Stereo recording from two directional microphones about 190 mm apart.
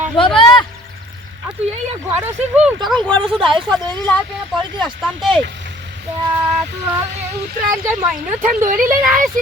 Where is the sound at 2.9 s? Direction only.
5° left (ahead or behind).